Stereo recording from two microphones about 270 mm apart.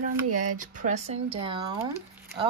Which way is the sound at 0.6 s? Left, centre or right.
Right.